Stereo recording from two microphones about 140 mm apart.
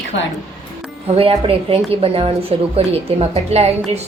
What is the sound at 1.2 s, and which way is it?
A woman's voice, 45° right (ahead or behind).